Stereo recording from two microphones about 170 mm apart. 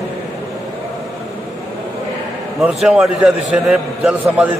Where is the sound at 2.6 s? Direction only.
5° right (ahead or behind).